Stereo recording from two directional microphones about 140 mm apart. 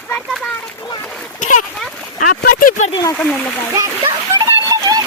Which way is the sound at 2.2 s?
80° left.